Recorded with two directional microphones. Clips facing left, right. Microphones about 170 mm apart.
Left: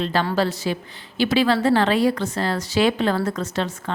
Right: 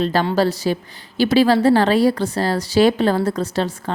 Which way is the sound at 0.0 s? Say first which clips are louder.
Right 4 dB; 40° right (ahead or behind).